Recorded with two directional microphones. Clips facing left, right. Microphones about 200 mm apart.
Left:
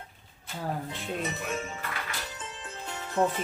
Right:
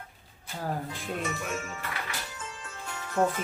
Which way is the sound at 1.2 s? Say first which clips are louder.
Left 1 dB; 20° left (ahead or behind).